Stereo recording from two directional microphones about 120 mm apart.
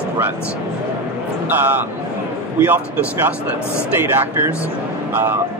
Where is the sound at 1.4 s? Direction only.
15° right (ahead or behind).